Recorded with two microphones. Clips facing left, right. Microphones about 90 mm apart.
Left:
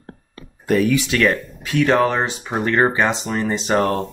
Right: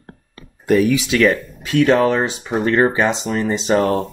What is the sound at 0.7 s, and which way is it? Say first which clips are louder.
Speech: right 2 dB; 15° right (ahead or behind).